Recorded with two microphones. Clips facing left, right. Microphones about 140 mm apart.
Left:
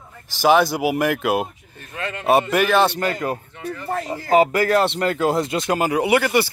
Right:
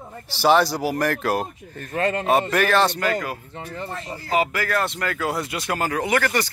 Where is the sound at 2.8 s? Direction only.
30° left (ahead or behind).